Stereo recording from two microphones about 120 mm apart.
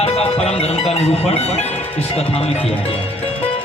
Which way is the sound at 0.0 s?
60° left (ahead or behind).